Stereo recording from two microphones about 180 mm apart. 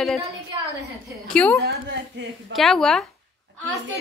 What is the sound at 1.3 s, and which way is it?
Speech, 5° left (ahead or behind).